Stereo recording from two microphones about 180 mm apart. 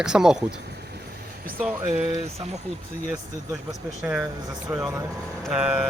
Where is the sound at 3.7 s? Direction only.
5° right (ahead or behind).